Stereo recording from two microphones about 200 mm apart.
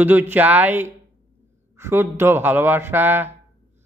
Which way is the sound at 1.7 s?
10° right (ahead or behind).